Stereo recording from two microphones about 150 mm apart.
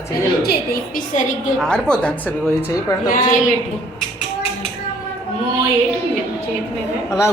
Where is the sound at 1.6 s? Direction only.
5° left (ahead or behind).